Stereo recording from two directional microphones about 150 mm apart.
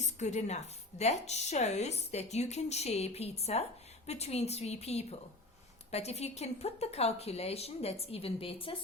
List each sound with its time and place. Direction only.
0.0 s a woman's voice: 50° left (ahead or behind)